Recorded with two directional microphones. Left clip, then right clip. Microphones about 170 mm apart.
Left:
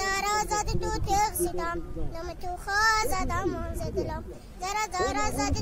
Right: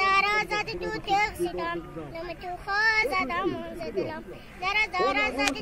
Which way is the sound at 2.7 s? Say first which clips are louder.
Right 1 dB; 20° left (ahead or behind).